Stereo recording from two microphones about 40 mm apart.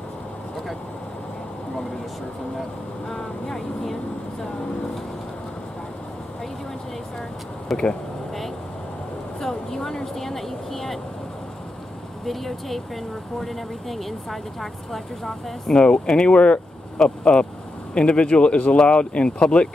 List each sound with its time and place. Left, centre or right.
3.1 s speech: centre
7.7 s speech: centre
9.4 s speech: centre
12.3 s speech: centre
15.7 s speech: left